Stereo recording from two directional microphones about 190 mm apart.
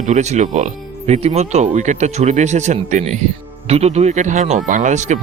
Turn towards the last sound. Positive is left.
turn(degrees=-40)  # may be behind; listen again after turning